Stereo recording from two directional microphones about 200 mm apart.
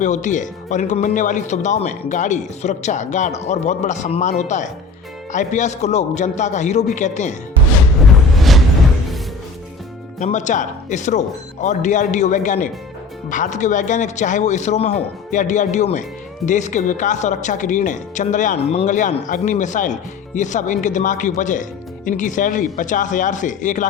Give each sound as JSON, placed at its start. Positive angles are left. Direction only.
{"t": 0.0, "sound": "speech", "side_deg": 40}
{"t": 8.0, "sound": "music", "side_deg": 0}
{"t": 10.2, "sound": "speech", "side_deg": 35}